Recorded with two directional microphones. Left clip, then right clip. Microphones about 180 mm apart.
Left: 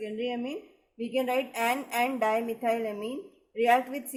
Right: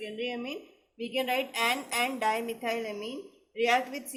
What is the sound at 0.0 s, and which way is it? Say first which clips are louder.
A woman's voice: left 2 dB; 60° left (ahead or behind).